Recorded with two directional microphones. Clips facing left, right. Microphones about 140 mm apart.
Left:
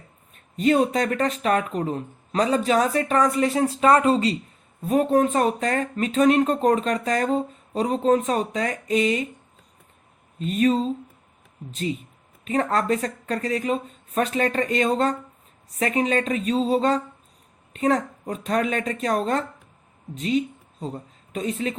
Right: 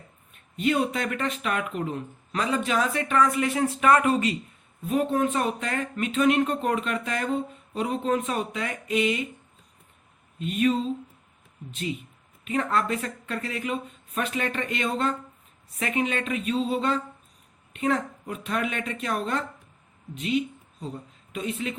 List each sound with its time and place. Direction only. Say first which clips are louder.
0.5 s speech: left 5 dB; 40° left (ahead or behind)
4.8 s speech: left 5 dB; 40° left (ahead or behind)
10.4 s speech: left 3 dB; 40° left (ahead or behind)
12.5 s speech: left 4 dB; 40° left (ahead or behind)